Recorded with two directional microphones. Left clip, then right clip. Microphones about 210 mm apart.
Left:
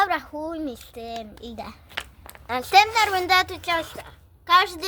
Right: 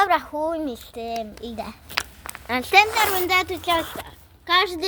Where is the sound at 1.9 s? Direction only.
40° right (ahead or behind).